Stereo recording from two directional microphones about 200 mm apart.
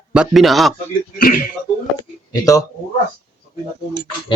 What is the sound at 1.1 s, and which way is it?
Speech, 45° left (ahead or behind).